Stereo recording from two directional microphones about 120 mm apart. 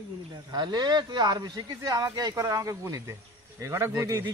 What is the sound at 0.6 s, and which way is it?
A man's voice, 35° right (ahead or behind).